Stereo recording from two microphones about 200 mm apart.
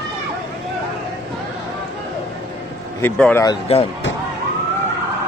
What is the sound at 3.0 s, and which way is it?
Speech, 10° left (ahead or behind).